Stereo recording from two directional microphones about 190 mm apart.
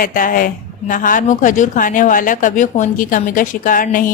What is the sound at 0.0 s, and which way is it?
A woman's voice, 45° left (ahead or behind).